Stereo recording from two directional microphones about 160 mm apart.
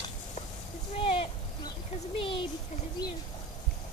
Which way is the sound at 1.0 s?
35° left (ahead or behind).